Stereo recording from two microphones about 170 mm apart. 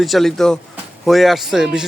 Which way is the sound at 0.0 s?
Centre (ahead or behind).